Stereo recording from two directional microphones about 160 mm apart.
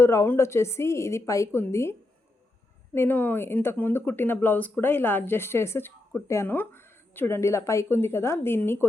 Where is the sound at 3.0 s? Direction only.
10° left (ahead or behind).